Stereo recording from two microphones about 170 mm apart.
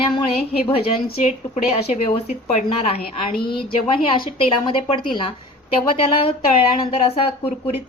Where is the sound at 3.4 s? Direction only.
30° left (ahead or behind).